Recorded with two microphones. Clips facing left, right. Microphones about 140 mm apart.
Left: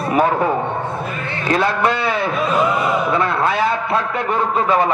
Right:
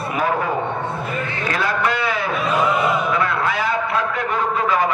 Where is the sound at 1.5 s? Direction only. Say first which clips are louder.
Left 5 dB; 25° left (ahead or behind).